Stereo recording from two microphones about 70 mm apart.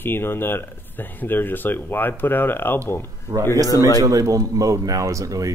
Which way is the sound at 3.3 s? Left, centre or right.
Right.